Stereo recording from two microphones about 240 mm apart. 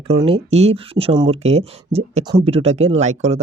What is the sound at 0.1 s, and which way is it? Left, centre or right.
Speech, right.